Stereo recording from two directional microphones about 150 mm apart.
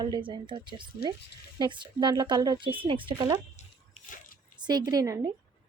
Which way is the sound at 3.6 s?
50° left (ahead or behind).